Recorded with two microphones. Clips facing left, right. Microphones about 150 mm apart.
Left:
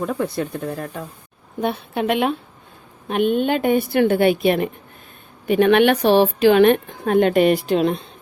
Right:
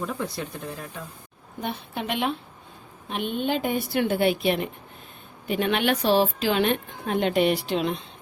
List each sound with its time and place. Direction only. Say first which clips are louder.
0.0 s a woman's voice: left 7 dB; 50° left (ahead or behind)